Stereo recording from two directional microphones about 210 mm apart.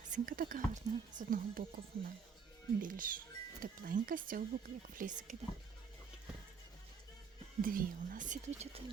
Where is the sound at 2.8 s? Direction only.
40° right (ahead or behind).